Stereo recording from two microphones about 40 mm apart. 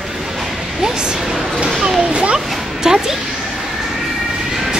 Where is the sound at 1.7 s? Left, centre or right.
Centre.